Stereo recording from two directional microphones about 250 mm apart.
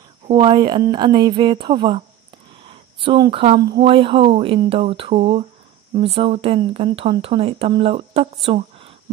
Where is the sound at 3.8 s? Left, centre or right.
Right.